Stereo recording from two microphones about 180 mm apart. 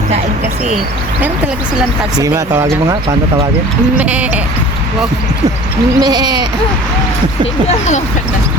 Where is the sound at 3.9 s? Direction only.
5° right (ahead or behind).